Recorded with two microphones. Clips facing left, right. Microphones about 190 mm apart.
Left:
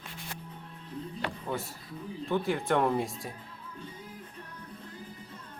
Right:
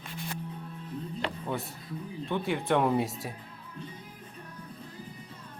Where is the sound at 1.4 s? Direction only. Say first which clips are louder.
Right 1 dB; centre (ahead or behind).